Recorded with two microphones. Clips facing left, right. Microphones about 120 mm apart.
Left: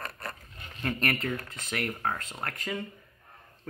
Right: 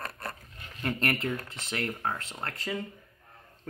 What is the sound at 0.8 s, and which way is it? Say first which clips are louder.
Speech: even; 25° right (ahead or behind).